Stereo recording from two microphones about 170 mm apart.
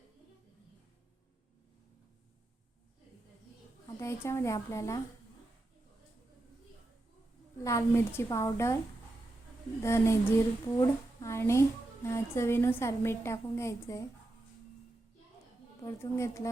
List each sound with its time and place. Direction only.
4.0 s a woman's voice: 15° left (ahead or behind)
7.6 s a woman's voice: 20° left (ahead or behind)
9.8 s a woman's voice: 15° left (ahead or behind)
15.8 s a woman's voice: 15° left (ahead or behind)